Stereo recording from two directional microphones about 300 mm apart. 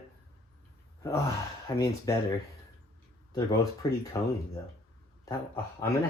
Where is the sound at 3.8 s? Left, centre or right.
Centre.